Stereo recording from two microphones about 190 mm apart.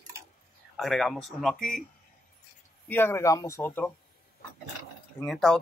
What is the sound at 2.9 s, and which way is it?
Speech, 10° left (ahead or behind).